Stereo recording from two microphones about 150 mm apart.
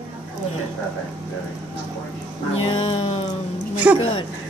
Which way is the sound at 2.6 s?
35° left (ahead or behind).